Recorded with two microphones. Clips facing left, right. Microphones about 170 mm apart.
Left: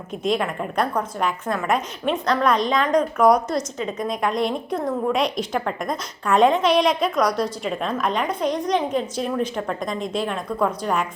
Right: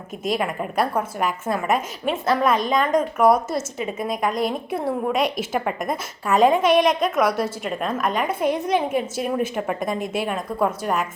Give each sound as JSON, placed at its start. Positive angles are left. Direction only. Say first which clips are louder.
{"t": 0.2, "sound": "a woman's voice", "louder": "left 1 dB", "side_deg": -5}